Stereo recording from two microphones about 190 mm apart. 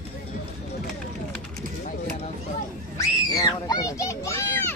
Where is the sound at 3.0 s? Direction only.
20° left (ahead or behind).